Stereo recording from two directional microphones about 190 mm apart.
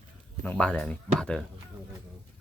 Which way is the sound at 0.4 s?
5° left (ahead or behind).